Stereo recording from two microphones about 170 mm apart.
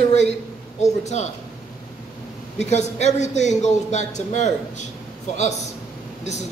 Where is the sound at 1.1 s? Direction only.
40° left (ahead or behind).